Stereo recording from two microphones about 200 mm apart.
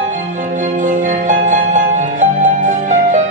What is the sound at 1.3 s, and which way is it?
Music, 35° right (ahead or behind).